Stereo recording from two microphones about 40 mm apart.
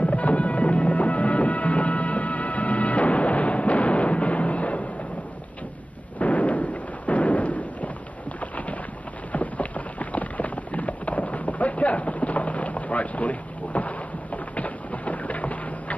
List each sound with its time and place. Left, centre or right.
0.0 s music: left
6.1 s explosion: left
8.4 s boat: left
9.3 s a sound: left